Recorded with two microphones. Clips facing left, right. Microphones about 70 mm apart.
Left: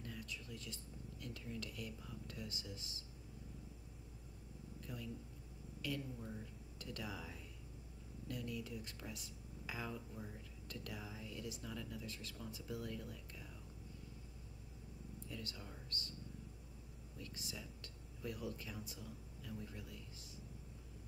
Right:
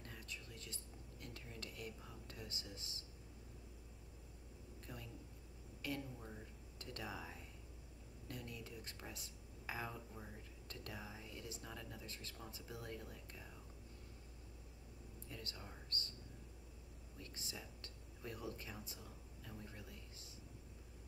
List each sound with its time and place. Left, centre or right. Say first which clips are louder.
0.0 s keys jangling: left 4 dB; right
1.2 s speech: left 5 dB; right
4.8 s speech: left 5 dB; right
5.8 s a sound: left 1 dB; right
6.8 s speech: left 1 dB; right
15.2 s speech: left 2 dB; right
17.2 s speech: left 2 dB; right